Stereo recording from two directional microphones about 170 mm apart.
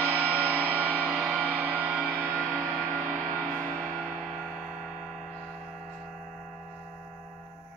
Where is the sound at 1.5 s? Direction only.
15° right (ahead or behind).